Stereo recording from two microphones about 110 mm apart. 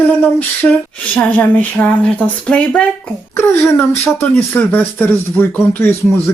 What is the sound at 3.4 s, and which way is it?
Speech, 20° left (ahead or behind).